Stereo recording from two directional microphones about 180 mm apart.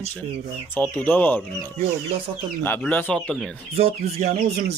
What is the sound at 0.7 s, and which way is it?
Speech, 10° left (ahead or behind).